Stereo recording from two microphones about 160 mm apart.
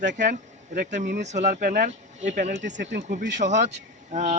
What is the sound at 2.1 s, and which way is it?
Speech, 45° right (ahead or behind).